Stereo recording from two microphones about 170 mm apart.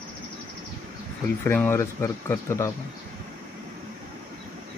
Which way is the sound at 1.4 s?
15° left (ahead or behind).